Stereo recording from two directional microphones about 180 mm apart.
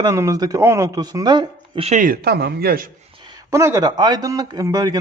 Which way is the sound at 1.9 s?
50° right (ahead or behind).